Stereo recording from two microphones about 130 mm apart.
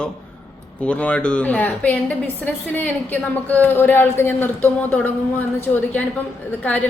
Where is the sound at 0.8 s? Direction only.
10° left (ahead or behind).